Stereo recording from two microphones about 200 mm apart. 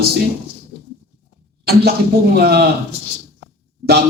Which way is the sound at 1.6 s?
50° right (ahead or behind).